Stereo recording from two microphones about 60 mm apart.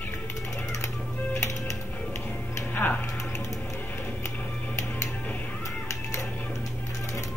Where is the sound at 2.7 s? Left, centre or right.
Left.